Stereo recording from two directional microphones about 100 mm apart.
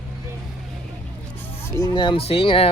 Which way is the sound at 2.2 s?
70° left (ahead or behind).